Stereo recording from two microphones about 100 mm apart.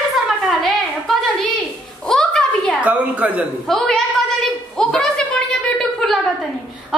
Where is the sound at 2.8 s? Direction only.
15° right (ahead or behind).